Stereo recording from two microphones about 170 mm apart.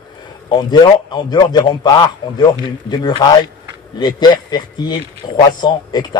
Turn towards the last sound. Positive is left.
turn(degrees=25)  # may be behind; listen again after turning